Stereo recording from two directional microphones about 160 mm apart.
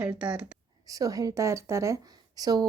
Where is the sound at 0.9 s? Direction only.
20° right (ahead or behind).